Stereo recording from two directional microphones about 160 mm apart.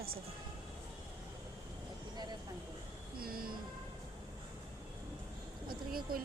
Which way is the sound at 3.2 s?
65° right (ahead or behind).